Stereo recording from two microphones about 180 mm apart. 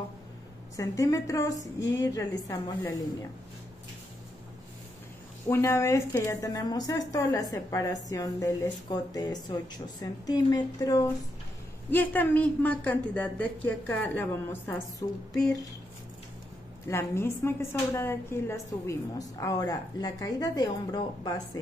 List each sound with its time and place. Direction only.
0.7 s a woman's voice: 20° left (ahead or behind)
5.5 s a woman's voice: 15° left (ahead or behind)
16.8 s a woman's voice: 15° left (ahead or behind)